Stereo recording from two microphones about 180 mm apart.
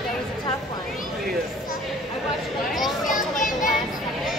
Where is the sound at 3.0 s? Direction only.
45° left (ahead or behind).